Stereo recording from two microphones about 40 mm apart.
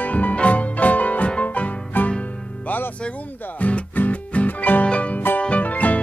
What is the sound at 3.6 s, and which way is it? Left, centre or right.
Music, left.